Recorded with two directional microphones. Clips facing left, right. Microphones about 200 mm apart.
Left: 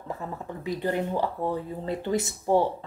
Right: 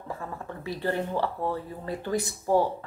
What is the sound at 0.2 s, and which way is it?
Speech, 20° left (ahead or behind).